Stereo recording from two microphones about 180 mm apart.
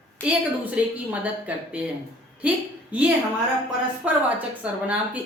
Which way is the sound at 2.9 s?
10° right (ahead or behind).